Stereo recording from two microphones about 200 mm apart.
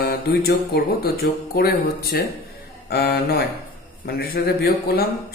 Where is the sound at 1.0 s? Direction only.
50° left (ahead or behind).